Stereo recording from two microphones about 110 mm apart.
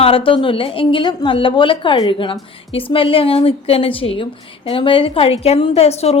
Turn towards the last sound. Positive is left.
turn(degrees=70)  # may be behind; listen again after turning